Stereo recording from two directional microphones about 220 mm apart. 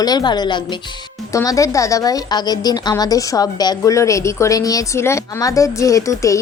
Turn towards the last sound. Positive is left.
turn(degrees=15)  # may be behind; listen again after turning